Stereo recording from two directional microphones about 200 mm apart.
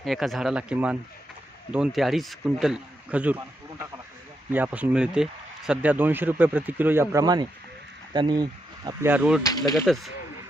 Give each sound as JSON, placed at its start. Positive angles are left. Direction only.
{"t": 0.0, "sound": "speech", "side_deg": 0}
{"t": 9.4, "sound": "speech", "side_deg": 20}
{"t": 9.8, "sound": "speech", "side_deg": 0}